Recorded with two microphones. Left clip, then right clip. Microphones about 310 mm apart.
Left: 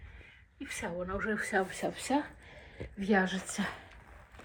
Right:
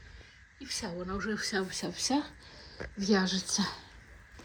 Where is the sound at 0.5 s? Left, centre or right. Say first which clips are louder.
Left 1 dB; centre.